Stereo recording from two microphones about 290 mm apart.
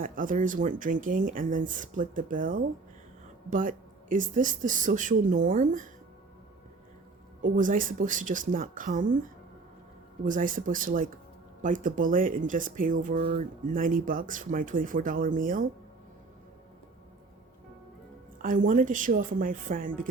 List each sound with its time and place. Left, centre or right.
0.0 s speech: right
7.4 s speech: right
10.2 s speech: right
18.4 s speech: right